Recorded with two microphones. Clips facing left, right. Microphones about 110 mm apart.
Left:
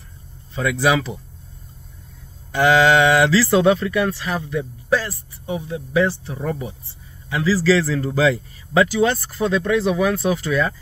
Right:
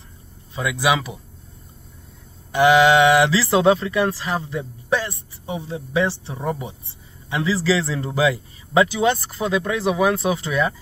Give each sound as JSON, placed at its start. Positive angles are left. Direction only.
{"t": 0.6, "sound": "speech", "side_deg": -15}
{"t": 2.5, "sound": "speech", "side_deg": -20}